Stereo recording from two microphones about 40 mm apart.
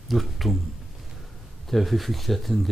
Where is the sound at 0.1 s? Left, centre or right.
Centre.